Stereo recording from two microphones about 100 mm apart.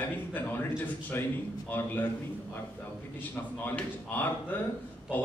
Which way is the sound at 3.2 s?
20° left (ahead or behind).